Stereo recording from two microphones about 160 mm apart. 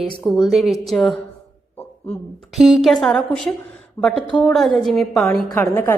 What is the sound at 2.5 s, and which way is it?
Speech, centre (ahead or behind).